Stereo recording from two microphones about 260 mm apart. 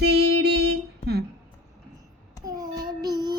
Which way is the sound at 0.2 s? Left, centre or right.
Right.